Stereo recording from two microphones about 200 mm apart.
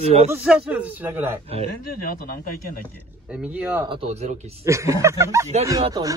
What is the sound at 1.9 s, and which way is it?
Speech, 45° left (ahead or behind).